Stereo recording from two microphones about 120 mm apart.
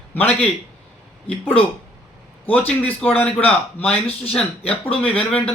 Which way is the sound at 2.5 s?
10° left (ahead or behind).